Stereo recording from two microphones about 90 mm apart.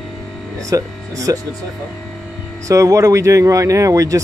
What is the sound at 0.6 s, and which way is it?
Speech, 35° right (ahead or behind).